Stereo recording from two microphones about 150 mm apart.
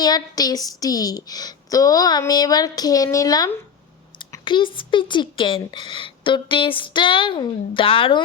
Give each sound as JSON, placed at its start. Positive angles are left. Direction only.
{"t": 0.0, "sound": "a woman's voice", "side_deg": 25}